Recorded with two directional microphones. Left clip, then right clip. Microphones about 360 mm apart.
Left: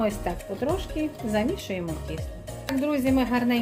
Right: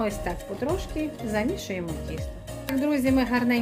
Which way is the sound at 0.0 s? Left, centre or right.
Centre.